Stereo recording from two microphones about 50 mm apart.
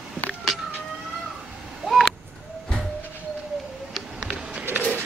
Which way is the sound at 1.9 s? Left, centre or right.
Centre.